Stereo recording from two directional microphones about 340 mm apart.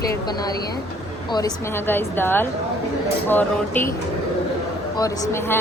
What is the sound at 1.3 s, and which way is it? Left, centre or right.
A woman's voice, centre.